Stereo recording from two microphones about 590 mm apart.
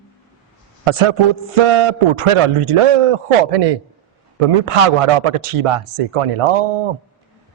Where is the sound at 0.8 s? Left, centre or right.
Right.